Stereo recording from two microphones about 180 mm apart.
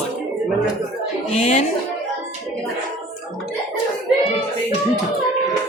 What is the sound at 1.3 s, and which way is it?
Speech, 35° left (ahead or behind).